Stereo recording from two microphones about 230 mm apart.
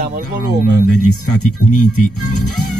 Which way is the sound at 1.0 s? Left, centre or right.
Left.